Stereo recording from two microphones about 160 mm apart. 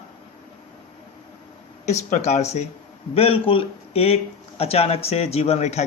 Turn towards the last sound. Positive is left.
turn(degrees=45)  # may be behind; listen again after turning